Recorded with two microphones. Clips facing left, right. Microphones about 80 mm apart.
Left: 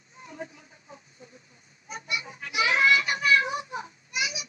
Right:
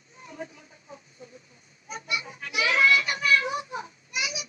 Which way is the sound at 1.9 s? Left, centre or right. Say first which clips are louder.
Right 1 dB; left.